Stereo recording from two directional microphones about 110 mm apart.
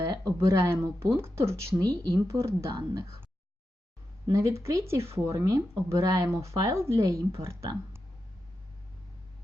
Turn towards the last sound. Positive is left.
turn(degrees=-25)  # may be behind; listen again after turning